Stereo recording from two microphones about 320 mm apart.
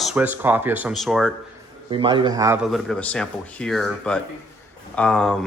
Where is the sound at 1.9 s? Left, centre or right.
Centre.